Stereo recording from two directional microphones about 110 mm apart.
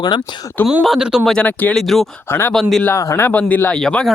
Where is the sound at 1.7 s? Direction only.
Centre (ahead or behind).